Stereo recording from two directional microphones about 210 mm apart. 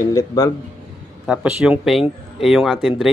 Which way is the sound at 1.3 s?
5° right (ahead or behind).